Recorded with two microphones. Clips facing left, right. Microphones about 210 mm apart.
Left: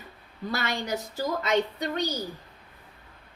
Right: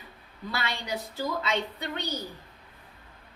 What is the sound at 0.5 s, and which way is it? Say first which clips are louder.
A woman's voice: left 3 dB; 45° left (ahead or behind).